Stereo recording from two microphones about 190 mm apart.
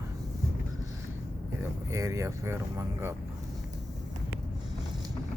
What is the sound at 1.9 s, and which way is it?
Speech, 15° right (ahead or behind).